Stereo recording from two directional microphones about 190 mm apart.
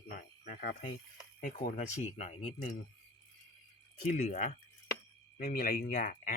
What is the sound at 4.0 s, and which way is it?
Speech, 40° left (ahead or behind).